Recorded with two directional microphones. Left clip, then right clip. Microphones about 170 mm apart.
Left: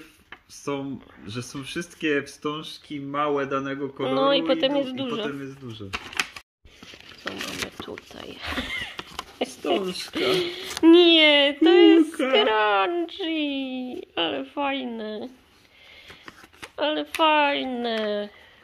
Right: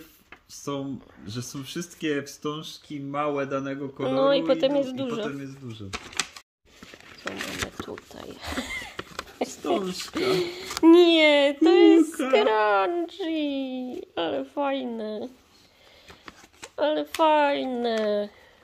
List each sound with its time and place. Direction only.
0.6 s speech: 50° right (ahead or behind)
4.0 s speech: 20° right (ahead or behind)
7.1 s a sound: 15° right (ahead or behind)
9.7 s speech: 20° right (ahead or behind)
12.0 s a sound: 50° right (ahead or behind)
12.3 s speech: 25° right (ahead or behind)
16.3 s speech: 25° right (ahead or behind)